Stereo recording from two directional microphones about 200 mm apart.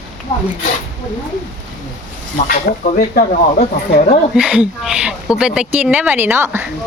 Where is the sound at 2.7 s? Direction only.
50° left (ahead or behind).